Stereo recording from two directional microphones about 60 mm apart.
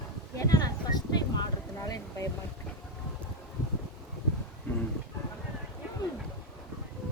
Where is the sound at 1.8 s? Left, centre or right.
Left.